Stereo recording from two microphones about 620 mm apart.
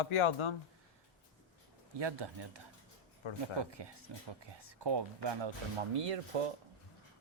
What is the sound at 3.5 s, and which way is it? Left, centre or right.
Speech, right.